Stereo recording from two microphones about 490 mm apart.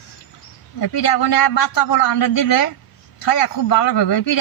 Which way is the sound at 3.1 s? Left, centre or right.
Left.